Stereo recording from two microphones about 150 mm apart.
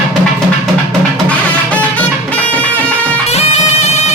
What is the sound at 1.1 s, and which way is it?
Music, 10° left (ahead or behind).